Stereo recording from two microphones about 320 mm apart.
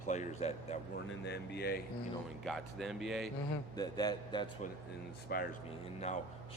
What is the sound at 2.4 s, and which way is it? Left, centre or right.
Speech, centre.